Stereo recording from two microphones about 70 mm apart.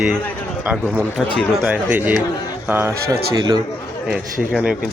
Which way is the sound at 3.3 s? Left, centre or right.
Right.